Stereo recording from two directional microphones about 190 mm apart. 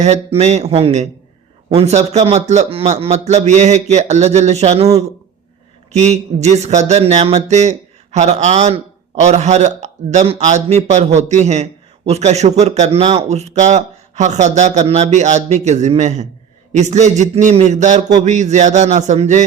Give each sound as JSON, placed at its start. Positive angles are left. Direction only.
{"t": 0.0, "sound": "a man's voice", "side_deg": -35}
{"t": 5.9, "sound": "a man's voice", "side_deg": -35}